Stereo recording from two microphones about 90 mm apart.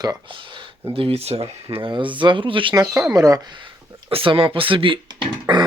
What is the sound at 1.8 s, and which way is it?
Speech, 65° right (ahead or behind).